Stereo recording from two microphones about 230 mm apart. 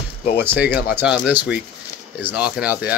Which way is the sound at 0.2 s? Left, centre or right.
Left.